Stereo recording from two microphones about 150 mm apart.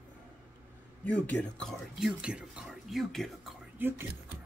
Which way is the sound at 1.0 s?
10° left (ahead or behind).